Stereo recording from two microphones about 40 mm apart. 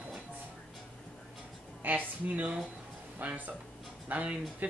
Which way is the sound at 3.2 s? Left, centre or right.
Right.